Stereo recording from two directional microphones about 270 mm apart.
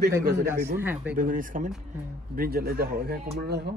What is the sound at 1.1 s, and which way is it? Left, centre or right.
Speech, right.